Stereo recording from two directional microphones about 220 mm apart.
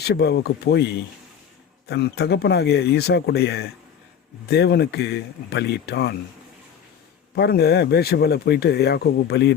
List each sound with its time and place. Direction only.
0.0 s speech: 50° left (ahead or behind)
7.3 s speech: 45° left (ahead or behind)